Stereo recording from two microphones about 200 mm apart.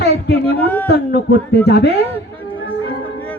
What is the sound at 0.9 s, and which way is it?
A man's voice, 55° left (ahead or behind).